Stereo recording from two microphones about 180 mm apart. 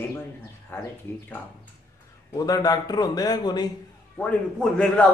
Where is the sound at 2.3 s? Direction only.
20° left (ahead or behind).